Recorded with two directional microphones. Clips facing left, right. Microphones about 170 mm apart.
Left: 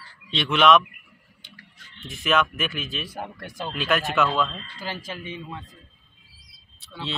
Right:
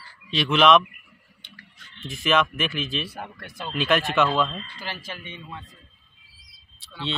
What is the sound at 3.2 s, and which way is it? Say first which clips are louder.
Speech: left 3 dB; 35° left (ahead or behind).